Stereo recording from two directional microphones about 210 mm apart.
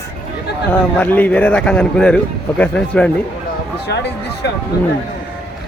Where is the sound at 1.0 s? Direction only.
10° left (ahead or behind).